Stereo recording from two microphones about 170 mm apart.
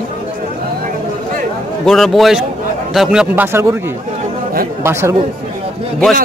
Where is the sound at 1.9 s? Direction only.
Centre (ahead or behind); by 5.1 s 15° right (ahead or behind).